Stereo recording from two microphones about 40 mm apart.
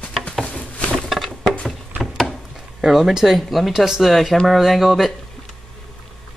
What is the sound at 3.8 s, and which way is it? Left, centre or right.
Speech, centre.